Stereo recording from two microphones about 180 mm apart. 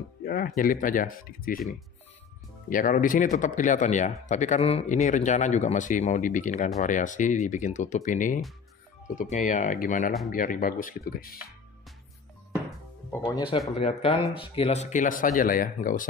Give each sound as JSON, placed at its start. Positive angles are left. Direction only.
{"t": 0.2, "sound": "a sound", "side_deg": 55}
{"t": 0.6, "sound": "speech", "side_deg": 50}
{"t": 2.7, "sound": "speech", "side_deg": 50}
{"t": 13.2, "sound": "speech", "side_deg": 25}